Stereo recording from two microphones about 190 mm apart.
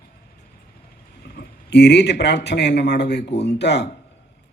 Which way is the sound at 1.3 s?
65° left (ahead or behind).